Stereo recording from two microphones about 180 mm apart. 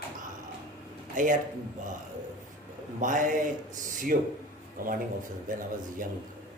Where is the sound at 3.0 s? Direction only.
45° right (ahead or behind).